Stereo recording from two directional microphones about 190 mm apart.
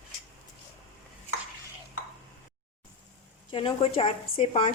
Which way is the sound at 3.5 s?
30° left (ahead or behind).